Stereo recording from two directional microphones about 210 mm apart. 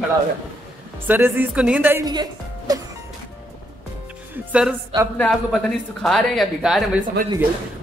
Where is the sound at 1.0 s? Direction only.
10° right (ahead or behind).